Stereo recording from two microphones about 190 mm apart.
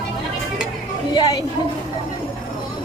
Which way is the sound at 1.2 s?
20° left (ahead or behind).